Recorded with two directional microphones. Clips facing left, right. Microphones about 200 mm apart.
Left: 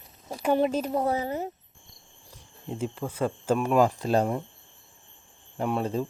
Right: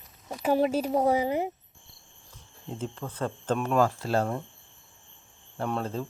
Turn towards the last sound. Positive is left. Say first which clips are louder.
# left 3 dB
turn(degrees=15)  # may be behind; listen again after turning